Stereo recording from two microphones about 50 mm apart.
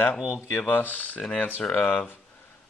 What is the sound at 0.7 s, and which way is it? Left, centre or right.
Speech, left.